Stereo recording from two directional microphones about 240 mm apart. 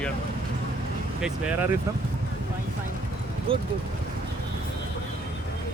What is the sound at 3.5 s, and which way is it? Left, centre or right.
Speech, right.